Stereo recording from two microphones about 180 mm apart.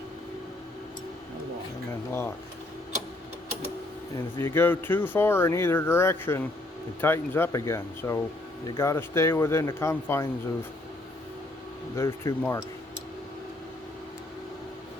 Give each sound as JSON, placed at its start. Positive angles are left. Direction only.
{"t": 4.4, "sound": "speech", "side_deg": 15}
{"t": 11.9, "sound": "speech", "side_deg": 15}